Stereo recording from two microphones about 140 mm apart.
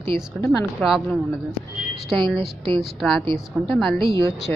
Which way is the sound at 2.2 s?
35° right (ahead or behind).